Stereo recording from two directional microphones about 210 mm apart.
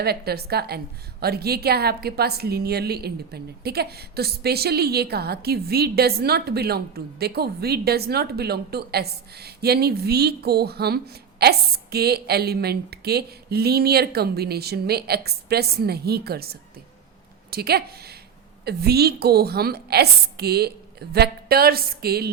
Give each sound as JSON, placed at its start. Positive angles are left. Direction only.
{"t": 0.0, "sound": "a woman's voice", "side_deg": -50}